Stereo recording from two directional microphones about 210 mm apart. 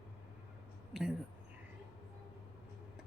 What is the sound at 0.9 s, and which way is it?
Speech, centre (ahead or behind).